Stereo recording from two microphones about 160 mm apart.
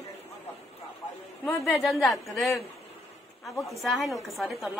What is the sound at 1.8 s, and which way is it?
A woman's voice, centre (ahead or behind).